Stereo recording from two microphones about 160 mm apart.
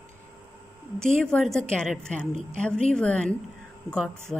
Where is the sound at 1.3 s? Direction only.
5° left (ahead or behind).